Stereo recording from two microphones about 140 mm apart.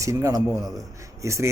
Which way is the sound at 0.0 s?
20° right (ahead or behind).